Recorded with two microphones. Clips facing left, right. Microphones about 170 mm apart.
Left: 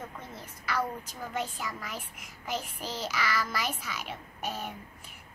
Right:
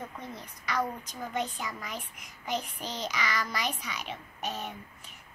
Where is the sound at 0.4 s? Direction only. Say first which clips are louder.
Even; 5° left (ahead or behind).